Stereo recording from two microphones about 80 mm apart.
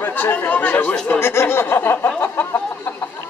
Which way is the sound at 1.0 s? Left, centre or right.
Left.